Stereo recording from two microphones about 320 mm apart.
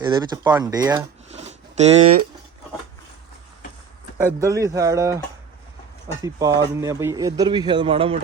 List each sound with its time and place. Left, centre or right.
0.0 s speech: centre
4.4 s a man's voice: centre
6.2 s a man's voice: centre